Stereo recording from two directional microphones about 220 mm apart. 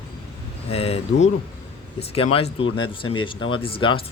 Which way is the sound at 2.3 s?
25° left (ahead or behind).